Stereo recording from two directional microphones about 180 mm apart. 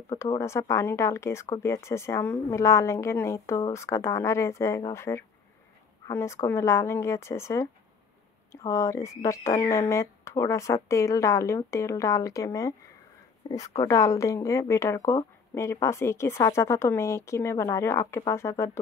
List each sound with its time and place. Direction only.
0.1 s speech: 20° left (ahead or behind)
13.4 s a woman's voice: 30° left (ahead or behind)
13.7 s speech: 15° left (ahead or behind)